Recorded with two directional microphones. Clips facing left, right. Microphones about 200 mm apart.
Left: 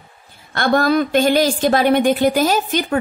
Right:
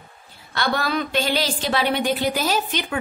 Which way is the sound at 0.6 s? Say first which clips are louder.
Left 8 dB; 45° left (ahead or behind).